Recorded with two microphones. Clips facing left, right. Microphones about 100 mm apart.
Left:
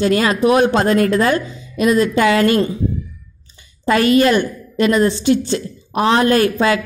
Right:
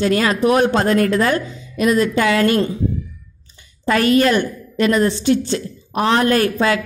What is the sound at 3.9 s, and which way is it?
A woman's voice, 20° left (ahead or behind).